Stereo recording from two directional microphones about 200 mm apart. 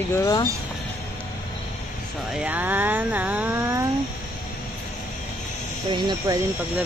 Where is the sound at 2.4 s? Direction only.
10° right (ahead or behind).